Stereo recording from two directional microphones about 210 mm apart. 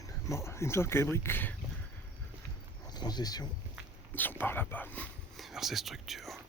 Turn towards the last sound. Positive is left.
turn(degrees=0)  # may be behind; listen again after turning